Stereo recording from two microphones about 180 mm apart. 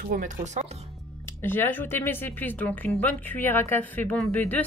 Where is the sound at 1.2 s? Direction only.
10° left (ahead or behind).